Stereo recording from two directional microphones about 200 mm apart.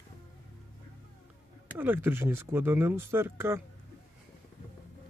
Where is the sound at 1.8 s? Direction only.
10° right (ahead or behind).